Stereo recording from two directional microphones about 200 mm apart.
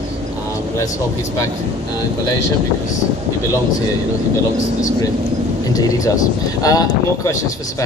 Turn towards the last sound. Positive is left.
turn(degrees=15)  # may be behind; listen again after turning